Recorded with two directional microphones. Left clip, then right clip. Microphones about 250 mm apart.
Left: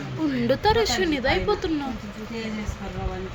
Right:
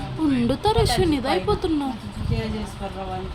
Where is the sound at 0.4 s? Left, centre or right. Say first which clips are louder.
Left 3 dB; right.